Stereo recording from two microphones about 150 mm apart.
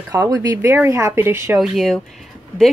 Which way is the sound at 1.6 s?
Centre (ahead or behind).